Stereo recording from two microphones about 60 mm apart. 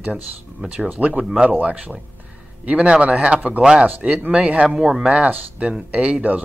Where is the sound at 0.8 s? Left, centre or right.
Right.